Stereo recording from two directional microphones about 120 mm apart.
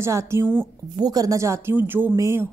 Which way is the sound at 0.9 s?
30° right (ahead or behind).